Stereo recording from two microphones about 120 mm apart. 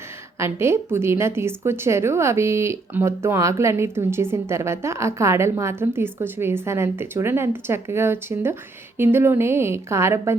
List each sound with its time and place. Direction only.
0.3 s a woman's voice: 20° right (ahead or behind)